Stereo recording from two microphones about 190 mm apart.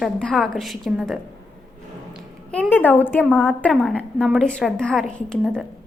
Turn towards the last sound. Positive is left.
turn(degrees=0)  # may be behind; listen again after turning